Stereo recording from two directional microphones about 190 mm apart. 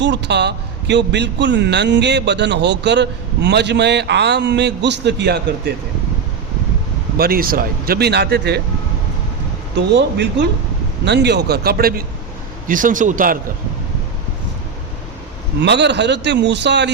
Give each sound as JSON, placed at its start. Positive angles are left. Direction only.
{"t": 0.0, "sound": "a man's voice", "side_deg": -65}
{"t": 7.2, "sound": "a man's voice", "side_deg": -50}
{"t": 9.7, "sound": "a man's voice", "side_deg": -65}
{"t": 15.6, "sound": "a man's voice", "side_deg": -65}